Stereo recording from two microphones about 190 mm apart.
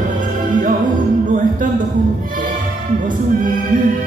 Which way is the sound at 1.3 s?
45° right (ahead or behind).